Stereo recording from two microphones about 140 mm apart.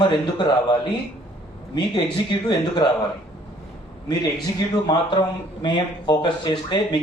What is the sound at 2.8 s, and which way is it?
Speech, 30° left (ahead or behind).